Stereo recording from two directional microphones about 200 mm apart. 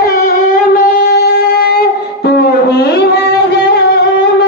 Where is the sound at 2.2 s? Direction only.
55° left (ahead or behind).